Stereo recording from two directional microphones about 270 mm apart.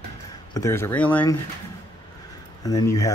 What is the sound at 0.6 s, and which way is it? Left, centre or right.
Speech, centre.